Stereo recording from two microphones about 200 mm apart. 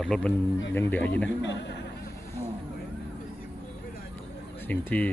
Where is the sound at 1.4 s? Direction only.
60° left (ahead or behind).